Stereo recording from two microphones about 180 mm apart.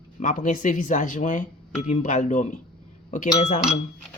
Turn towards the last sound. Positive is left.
turn(degrees=40)  # may be behind; listen again after turning